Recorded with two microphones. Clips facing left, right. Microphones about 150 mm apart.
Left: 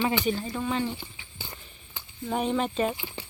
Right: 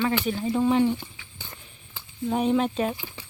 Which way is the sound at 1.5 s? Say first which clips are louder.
Even; centre (ahead or behind).